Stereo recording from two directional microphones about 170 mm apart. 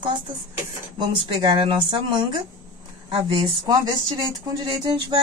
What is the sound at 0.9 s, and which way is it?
Speech, 25° right (ahead or behind).